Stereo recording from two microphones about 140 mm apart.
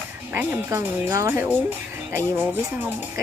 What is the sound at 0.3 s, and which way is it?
Speech, 15° right (ahead or behind).